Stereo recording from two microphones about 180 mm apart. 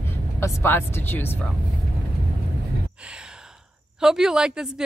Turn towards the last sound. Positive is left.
turn(degrees=-5)  # may be behind; listen again after turning